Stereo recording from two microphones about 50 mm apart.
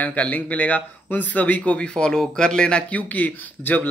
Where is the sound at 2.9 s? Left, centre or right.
Left.